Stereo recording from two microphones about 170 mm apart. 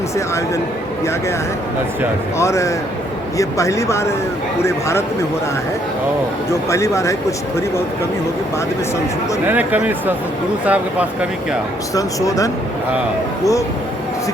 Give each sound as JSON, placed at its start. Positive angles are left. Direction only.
{"t": 2.4, "sound": "a man's voice", "side_deg": 15}
{"t": 6.7, "sound": "a man's voice", "side_deg": 15}
{"t": 9.5, "sound": "speech", "side_deg": -10}
{"t": 11.9, "sound": "speech", "side_deg": 20}